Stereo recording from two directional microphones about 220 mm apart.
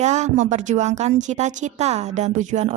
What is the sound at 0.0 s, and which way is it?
A woman's voice, 30° right (ahead or behind).